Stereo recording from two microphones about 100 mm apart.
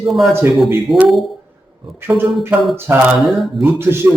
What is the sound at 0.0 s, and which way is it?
A man's voice, centre (ahead or behind).